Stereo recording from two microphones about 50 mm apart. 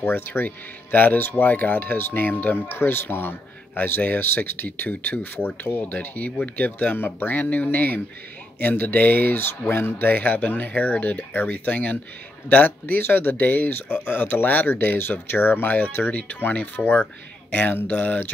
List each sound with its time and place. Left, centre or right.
0.0 s speech: left